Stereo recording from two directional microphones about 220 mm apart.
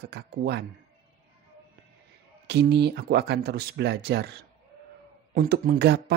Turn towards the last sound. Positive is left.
turn(degrees=-50)  # may be behind; listen again after turning